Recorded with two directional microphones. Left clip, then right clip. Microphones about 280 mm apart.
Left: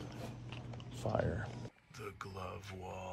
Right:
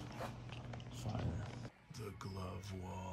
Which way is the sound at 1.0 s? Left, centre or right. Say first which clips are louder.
Left 12 dB; left.